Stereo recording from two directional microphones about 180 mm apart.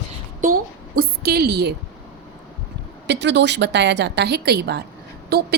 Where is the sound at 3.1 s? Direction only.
75° right (ahead or behind).